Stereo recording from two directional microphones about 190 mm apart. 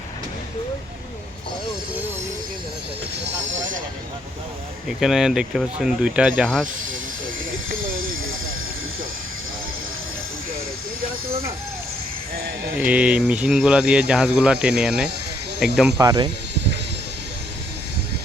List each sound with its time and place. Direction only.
3.3 s train: 75° right (ahead or behind)
4.9 s speech: centre (ahead or behind)
7.8 s a sound: 90° right
12.7 s speech: 5° right (ahead or behind)
16.0 s speech: 20° right (ahead or behind)